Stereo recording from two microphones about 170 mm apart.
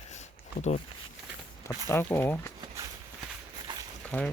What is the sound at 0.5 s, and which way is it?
Speech, 50° left (ahead or behind).